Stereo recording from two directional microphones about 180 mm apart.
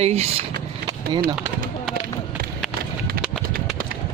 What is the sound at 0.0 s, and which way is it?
Speech, 35° right (ahead or behind).